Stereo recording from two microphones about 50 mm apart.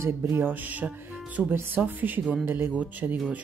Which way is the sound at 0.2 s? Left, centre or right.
Right.